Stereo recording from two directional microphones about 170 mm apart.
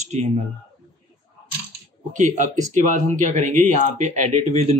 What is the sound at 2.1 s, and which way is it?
Speech, 45° right (ahead or behind).